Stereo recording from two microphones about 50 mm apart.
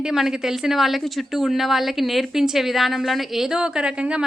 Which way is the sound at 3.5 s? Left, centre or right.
Centre.